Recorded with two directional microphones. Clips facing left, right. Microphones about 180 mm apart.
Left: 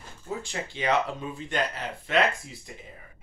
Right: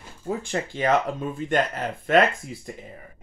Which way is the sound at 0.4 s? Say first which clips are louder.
Right 7 dB; 50° right (ahead or behind).